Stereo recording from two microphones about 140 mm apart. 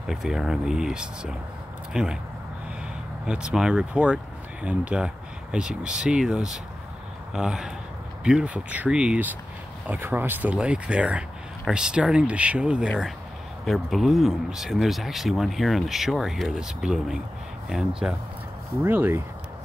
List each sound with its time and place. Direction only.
0.0 s speech: 5° right (ahead or behind)
3.3 s speech: 5° right (ahead or behind)
18.9 s speech: 15° right (ahead or behind)